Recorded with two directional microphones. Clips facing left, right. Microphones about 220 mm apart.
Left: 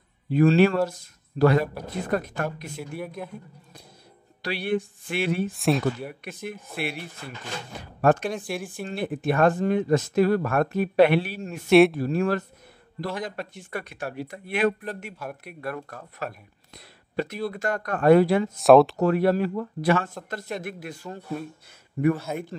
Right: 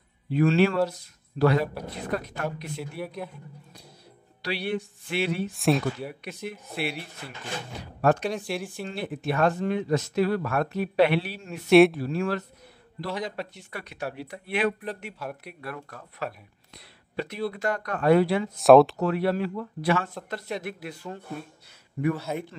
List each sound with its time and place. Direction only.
0.3 s a man's voice: 45° left (ahead or behind)
4.4 s speech: 50° left (ahead or behind)
5.5 s speech: centre (ahead or behind)
6.2 s speech: 50° left (ahead or behind)
8.0 s speech: 50° left (ahead or behind)
11.7 s speech: centre (ahead or behind)
12.0 s speech: 45° left (ahead or behind)
16.7 s a sound: 45° left (ahead or behind)
17.5 s speech: 45° left (ahead or behind)
18.6 s speech: centre (ahead or behind)
18.9 s speech: 45° left (ahead or behind)
22.3 s speech: centre (ahead or behind)